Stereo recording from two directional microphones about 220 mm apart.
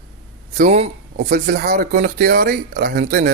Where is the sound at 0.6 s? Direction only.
30° right (ahead or behind).